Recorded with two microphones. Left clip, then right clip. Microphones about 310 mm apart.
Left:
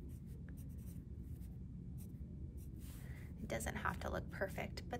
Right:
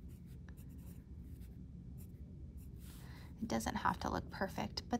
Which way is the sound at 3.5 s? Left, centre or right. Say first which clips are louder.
Right 5 dB; centre.